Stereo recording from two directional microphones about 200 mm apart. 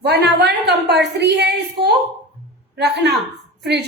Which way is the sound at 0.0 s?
55° right (ahead or behind).